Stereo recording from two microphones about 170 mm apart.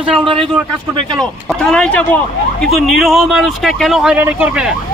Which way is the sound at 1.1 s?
5° left (ahead or behind).